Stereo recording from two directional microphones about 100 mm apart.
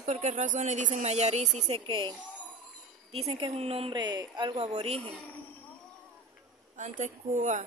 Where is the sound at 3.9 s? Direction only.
45° right (ahead or behind).